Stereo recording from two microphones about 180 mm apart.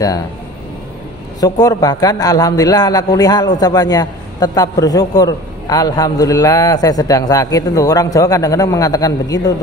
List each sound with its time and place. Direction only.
1.4 s a man's voice: 20° left (ahead or behind)